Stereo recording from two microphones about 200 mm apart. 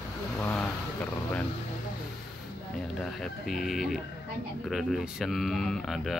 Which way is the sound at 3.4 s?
Centre (ahead or behind).